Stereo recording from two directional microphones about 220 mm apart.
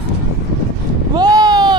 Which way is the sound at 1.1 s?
20° right (ahead or behind).